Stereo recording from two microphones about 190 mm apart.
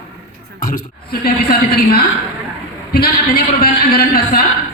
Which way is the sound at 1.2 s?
50° left (ahead or behind).